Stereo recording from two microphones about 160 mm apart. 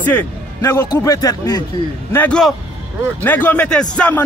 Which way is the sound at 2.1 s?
5° left (ahead or behind).